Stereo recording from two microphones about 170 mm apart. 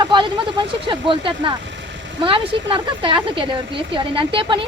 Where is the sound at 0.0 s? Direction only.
25° right (ahead or behind).